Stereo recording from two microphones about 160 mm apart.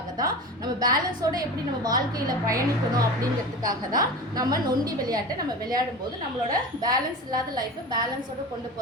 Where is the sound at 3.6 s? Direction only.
25° right (ahead or behind).